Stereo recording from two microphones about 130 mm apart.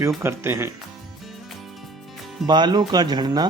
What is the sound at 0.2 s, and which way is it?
Speech, 20° right (ahead or behind).